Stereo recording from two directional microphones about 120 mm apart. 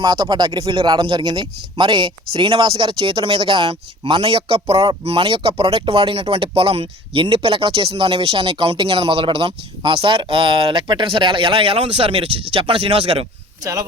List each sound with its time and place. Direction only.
0.0 s speech: 35° right (ahead or behind); by 13.2 s 55° right (ahead or behind)